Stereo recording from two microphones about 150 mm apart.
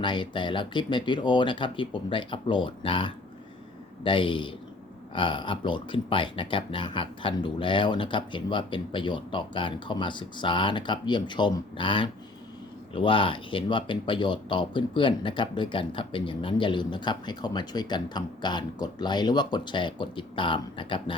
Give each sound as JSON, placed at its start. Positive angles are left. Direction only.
{"t": 0.0, "sound": "speech", "side_deg": 30}